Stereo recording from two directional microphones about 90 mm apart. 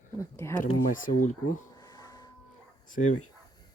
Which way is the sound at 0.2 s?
30° left (ahead or behind).